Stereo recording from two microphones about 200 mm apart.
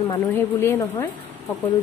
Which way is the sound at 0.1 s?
15° left (ahead or behind).